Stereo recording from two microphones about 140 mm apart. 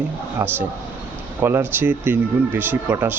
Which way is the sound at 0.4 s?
15° right (ahead or behind).